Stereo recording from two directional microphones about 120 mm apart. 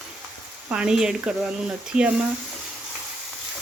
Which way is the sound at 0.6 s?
10° right (ahead or behind).